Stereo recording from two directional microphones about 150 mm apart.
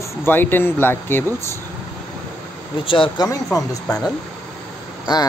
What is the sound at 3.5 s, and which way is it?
Speech, 25° left (ahead or behind).